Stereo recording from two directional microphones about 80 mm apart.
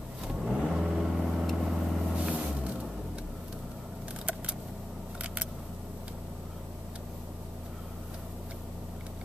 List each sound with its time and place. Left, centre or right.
0.5 s vehicle: centre
5.2 s single-lens reflex camera: centre